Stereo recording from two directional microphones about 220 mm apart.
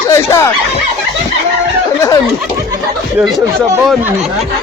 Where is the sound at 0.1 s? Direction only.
10° left (ahead or behind).